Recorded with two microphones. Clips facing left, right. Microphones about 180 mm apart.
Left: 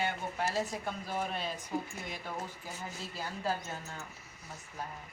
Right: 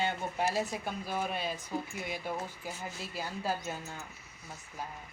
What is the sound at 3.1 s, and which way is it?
Speech, 10° right (ahead or behind).